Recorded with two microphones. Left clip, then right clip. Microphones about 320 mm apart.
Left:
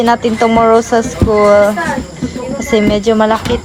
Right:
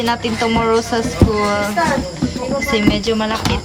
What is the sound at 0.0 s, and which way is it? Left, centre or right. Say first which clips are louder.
Speech: left 7 dB; centre.